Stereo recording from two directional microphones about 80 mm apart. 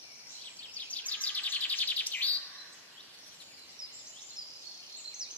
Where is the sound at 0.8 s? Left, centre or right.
Centre.